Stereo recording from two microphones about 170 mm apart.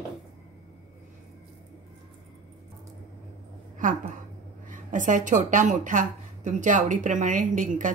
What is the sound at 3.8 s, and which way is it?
Speech, 50° right (ahead or behind).